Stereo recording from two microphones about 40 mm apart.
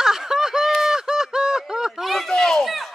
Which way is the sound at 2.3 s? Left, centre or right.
Centre.